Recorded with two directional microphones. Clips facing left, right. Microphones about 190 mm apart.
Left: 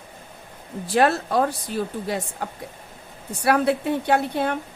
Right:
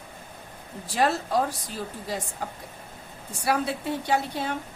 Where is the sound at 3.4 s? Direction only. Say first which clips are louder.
Left 6 dB; 60° left (ahead or behind).